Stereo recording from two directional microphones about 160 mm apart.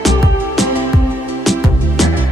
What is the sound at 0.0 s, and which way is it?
Music, centre (ahead or behind).